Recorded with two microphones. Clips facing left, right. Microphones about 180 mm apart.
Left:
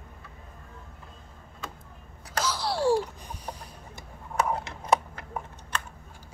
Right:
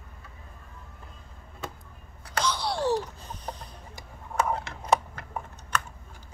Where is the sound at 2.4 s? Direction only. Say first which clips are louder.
Left 1 dB; 5° left (ahead or behind).